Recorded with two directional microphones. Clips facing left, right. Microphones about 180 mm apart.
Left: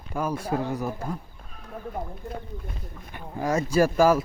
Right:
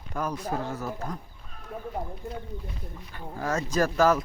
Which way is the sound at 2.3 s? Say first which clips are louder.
Left 1 dB; 50° left (ahead or behind).